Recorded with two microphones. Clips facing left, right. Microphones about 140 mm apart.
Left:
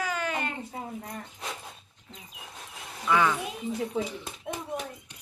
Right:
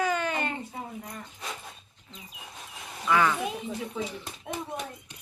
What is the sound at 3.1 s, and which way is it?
Speech, 5° left (ahead or behind).